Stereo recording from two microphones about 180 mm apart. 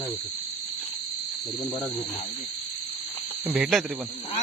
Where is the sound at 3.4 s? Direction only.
5° right (ahead or behind).